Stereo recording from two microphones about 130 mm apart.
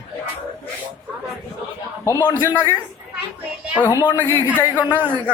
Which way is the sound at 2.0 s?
30° left (ahead or behind).